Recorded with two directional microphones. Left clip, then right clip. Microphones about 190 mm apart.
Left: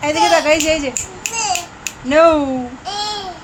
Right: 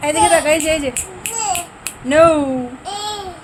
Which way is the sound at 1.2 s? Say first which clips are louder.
Left 4 dB; 20° right (ahead or behind).